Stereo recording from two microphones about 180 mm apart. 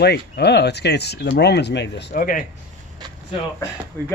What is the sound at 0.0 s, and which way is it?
Speech, 65° left (ahead or behind).